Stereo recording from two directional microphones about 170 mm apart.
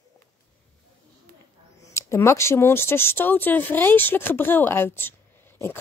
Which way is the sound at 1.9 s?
15° left (ahead or behind).